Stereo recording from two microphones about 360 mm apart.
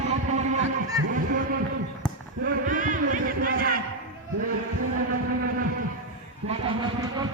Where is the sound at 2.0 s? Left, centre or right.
Centre.